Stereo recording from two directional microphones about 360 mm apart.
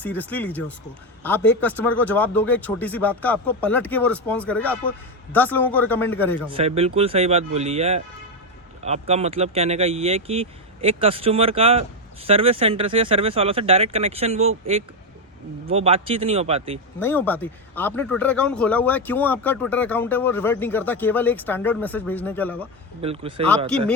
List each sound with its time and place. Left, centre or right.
0.0 s speech: centre
6.5 s speech: centre
15.6 s speech: centre
17.0 s speech: centre
23.0 s speech: centre